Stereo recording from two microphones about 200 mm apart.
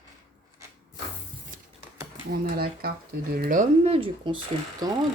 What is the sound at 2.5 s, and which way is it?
Speech, 50° right (ahead or behind).